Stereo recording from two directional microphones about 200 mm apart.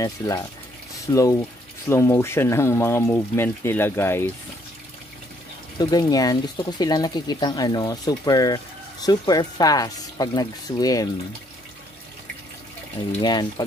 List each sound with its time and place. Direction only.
0.0 s speech: 15° left (ahead or behind)
5.8 s speech: 20° left (ahead or behind)
13.2 s speech: 20° left (ahead or behind)